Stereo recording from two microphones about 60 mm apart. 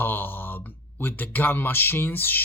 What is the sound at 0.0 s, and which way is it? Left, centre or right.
Speech, left.